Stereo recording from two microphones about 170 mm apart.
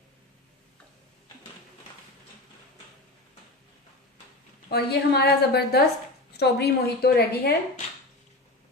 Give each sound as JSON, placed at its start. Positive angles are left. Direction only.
{"t": 4.7, "sound": "a woman's voice", "side_deg": 75}